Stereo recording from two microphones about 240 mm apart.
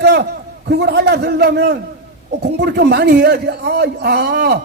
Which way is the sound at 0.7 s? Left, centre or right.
Right.